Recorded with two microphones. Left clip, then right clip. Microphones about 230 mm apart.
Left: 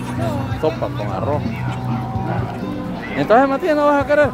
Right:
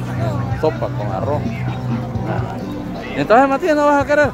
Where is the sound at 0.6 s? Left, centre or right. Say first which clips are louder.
Right 2 dB; centre.